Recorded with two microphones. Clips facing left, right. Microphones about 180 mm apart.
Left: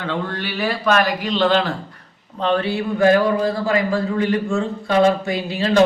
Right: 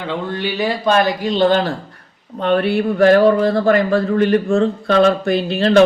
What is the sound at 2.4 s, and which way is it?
A man's voice, 60° right (ahead or behind).